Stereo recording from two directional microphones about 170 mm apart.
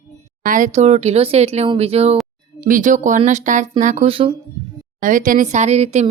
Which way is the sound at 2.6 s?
50° right (ahead or behind).